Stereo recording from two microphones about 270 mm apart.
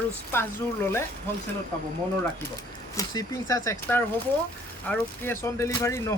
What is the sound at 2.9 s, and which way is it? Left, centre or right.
Speech, centre.